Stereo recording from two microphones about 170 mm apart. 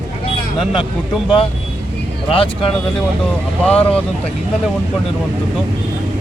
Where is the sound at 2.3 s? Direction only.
30° left (ahead or behind).